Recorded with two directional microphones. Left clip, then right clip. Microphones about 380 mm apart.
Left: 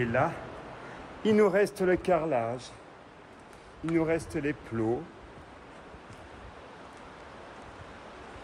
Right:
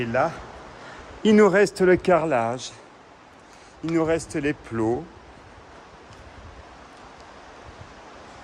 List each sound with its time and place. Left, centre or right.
0.0 s speech: centre
1.2 s a man's voice: right
3.9 s a man's voice: centre